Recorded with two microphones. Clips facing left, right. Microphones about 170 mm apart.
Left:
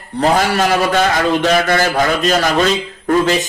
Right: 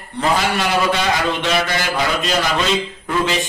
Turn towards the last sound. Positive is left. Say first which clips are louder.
# left 6 dB
turn(degrees=45)  # may be behind; listen again after turning